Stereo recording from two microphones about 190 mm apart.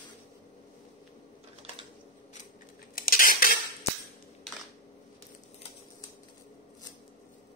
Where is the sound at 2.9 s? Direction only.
50° left (ahead or behind).